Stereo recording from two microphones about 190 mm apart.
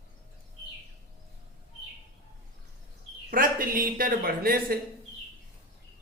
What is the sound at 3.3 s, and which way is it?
Speech, 45° right (ahead or behind).